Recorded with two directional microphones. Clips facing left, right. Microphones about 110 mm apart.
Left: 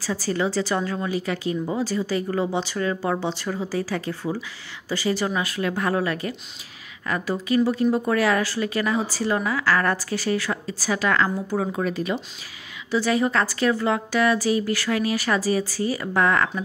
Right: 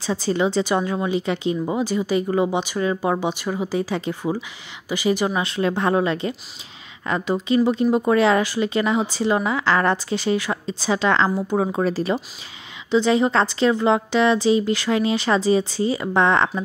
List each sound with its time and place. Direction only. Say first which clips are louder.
0.0 s speech: right 3 dB; 20° right (ahead or behind)